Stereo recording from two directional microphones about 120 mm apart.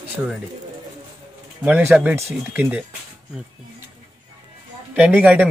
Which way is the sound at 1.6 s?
15° right (ahead or behind).